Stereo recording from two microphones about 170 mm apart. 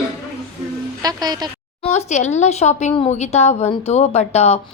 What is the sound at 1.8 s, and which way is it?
A woman's voice, 40° left (ahead or behind).